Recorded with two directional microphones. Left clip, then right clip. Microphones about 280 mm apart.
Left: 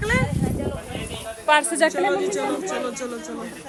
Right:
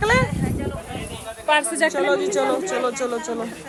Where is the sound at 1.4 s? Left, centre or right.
Left.